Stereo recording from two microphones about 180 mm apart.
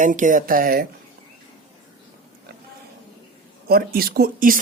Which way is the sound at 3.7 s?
55° right (ahead or behind).